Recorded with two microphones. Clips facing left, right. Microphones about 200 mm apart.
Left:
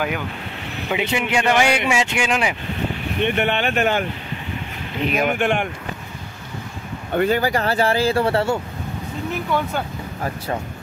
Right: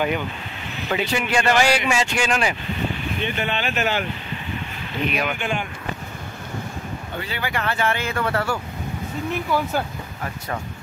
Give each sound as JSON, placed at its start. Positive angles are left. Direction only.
{"t": 0.9, "sound": "speech", "side_deg": 20}
{"t": 3.2, "sound": "speech", "side_deg": 65}
{"t": 5.1, "sound": "speech", "side_deg": 50}
{"t": 7.2, "sound": "speech", "side_deg": 45}
{"t": 9.3, "sound": "speech", "side_deg": -5}